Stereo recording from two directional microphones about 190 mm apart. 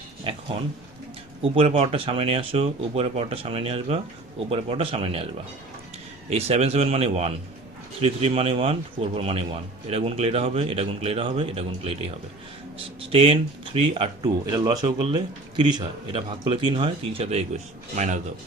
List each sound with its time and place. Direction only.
0.3 s a sound: 30° right (ahead or behind)
1.4 s speech: 30° right (ahead or behind)
6.3 s speech: 35° right (ahead or behind)
13.1 s speech: 30° right (ahead or behind)